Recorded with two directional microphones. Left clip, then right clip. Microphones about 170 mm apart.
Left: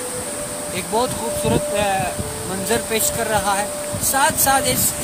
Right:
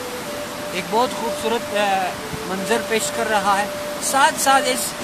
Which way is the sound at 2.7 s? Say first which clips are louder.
Even; 20° left (ahead or behind).